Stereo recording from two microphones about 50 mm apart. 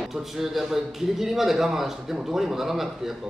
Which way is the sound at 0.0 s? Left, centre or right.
Centre.